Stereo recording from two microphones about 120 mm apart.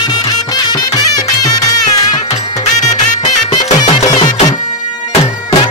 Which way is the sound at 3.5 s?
35° left (ahead or behind).